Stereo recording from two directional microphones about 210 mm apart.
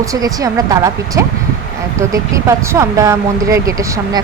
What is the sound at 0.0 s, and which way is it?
Speech, 15° right (ahead or behind).